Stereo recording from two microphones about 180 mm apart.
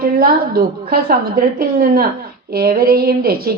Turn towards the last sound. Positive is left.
turn(degrees=-60)  # may be behind; listen again after turning